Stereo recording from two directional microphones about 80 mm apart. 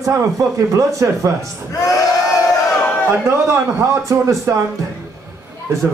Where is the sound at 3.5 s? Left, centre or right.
Right.